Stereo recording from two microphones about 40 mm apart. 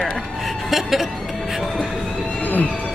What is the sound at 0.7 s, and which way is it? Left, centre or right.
Music, centre.